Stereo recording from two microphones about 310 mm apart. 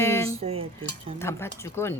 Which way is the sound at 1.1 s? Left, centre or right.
Centre.